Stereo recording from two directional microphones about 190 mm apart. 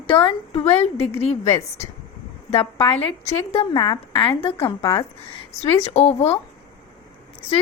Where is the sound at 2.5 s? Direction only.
30° left (ahead or behind).